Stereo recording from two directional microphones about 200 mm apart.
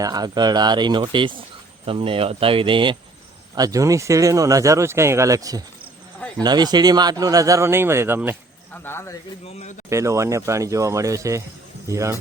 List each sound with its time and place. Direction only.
0.0 s speech: 20° right (ahead or behind)
8.7 s speech: 10° left (ahead or behind)
9.9 s speech: 15° right (ahead or behind)